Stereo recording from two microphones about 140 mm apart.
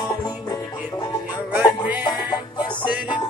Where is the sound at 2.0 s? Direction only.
30° left (ahead or behind).